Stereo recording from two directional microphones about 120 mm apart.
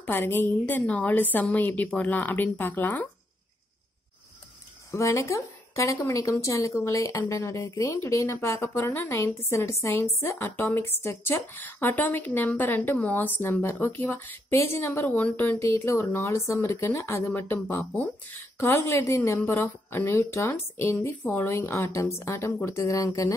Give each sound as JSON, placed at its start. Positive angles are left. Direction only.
{"t": 0.0, "sound": "a woman's voice", "side_deg": 15}
{"t": 4.9, "sound": "a woman's voice", "side_deg": 25}